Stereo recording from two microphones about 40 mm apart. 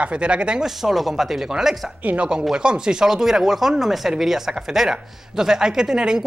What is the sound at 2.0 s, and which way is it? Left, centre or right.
Speech, right.